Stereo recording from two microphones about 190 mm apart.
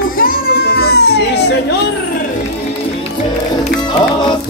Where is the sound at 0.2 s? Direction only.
50° left (ahead or behind).